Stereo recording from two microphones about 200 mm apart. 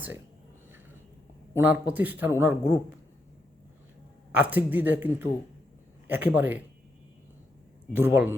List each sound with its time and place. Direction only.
1.5 s speech: 10° right (ahead or behind)
4.3 s speech: 5° right (ahead or behind)
7.9 s speech: 10° right (ahead or behind)